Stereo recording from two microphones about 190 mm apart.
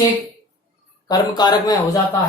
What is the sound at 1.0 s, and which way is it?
Speech, 20° left (ahead or behind).